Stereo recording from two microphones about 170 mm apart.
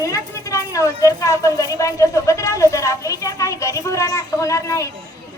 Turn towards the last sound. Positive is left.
turn(degrees=20)  # may be behind; listen again after turning